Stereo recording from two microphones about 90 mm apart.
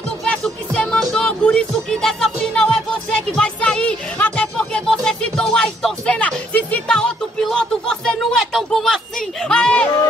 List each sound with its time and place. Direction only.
0.2 s music: 5° left (ahead or behind)